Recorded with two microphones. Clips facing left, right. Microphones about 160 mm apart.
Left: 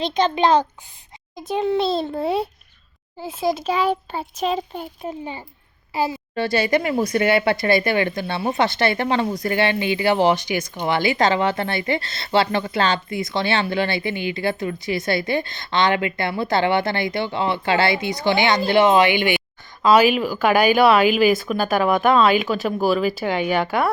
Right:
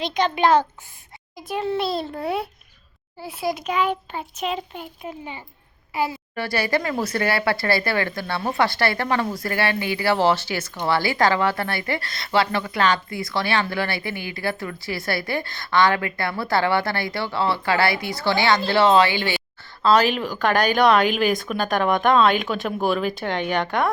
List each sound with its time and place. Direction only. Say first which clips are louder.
0.0 s a woman's voice: left 2 dB; 25° left (ahead or behind); by 23.9 s 5° left (ahead or behind)